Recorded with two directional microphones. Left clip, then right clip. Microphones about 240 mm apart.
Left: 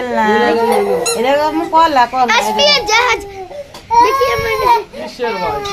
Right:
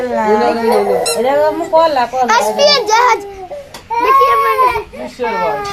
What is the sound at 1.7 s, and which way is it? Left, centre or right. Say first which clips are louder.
Speech: left 1 dB; left.